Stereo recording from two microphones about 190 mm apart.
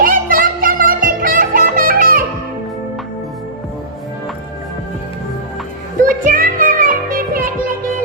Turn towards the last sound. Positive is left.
turn(degrees=-45)  # may be behind; listen again after turning